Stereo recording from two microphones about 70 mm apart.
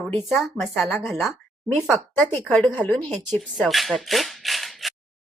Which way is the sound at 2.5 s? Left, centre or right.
Centre.